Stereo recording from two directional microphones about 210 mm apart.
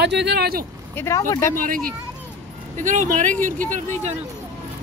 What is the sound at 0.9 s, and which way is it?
Speech, 15° left (ahead or behind).